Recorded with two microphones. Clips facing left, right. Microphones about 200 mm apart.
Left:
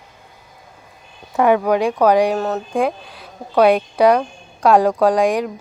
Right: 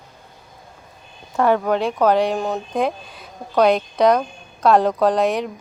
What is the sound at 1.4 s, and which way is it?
Speech, 10° left (ahead or behind).